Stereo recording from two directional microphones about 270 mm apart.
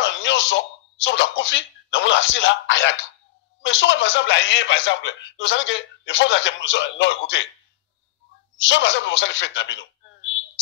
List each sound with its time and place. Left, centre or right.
0.0 s speech: left
8.5 s speech: left